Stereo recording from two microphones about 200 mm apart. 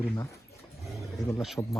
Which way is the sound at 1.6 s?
10° left (ahead or behind).